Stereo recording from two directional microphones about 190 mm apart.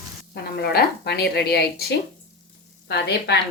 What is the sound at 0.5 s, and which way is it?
A woman's voice, 60° left (ahead or behind).